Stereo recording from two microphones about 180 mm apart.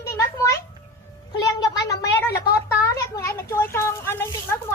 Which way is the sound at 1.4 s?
20° left (ahead or behind).